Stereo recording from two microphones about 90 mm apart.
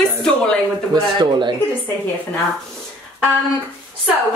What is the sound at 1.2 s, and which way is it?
Speech, 60° right (ahead or behind).